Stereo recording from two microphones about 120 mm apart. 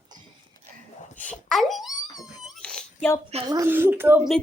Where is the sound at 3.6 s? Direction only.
20° right (ahead or behind).